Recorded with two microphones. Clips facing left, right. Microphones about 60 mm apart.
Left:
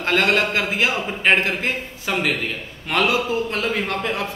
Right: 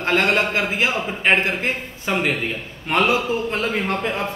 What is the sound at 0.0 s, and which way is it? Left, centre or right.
A man's voice, right.